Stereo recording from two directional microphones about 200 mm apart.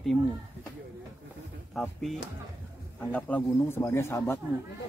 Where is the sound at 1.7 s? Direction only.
Centre (ahead or behind).